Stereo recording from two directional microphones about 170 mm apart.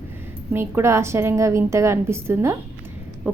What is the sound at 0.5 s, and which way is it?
A woman's voice, 15° right (ahead or behind).